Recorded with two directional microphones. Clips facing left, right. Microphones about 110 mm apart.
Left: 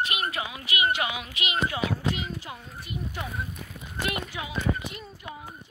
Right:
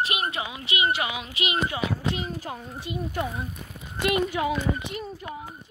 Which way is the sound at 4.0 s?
60° right (ahead or behind).